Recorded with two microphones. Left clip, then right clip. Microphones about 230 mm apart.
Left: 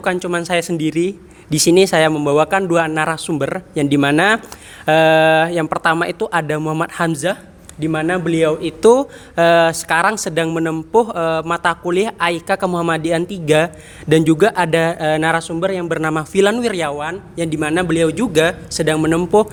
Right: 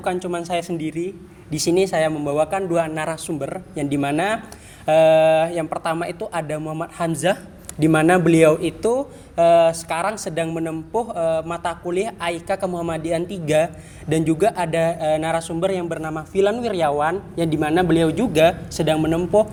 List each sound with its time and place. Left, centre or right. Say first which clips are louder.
0.0 s speech: left 5 dB; left
7.8 s speech: right 3 dB; centre
8.8 s speech: left 9 dB; left
17.0 s a man's voice: right 2 dB; centre; by 18.9 s left
18.9 s speech: left 4 dB; left